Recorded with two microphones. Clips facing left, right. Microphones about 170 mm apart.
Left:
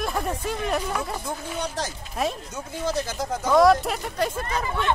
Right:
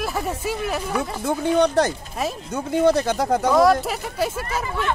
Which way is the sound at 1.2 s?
70° right (ahead or behind).